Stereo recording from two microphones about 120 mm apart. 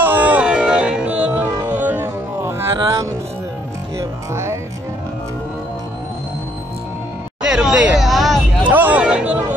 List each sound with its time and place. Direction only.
0.0 s music: 15° right (ahead or behind)
4.0 s music: 25° right (ahead or behind)
7.4 s a sound: 5° right (ahead or behind)
8.6 s music: 15° right (ahead or behind)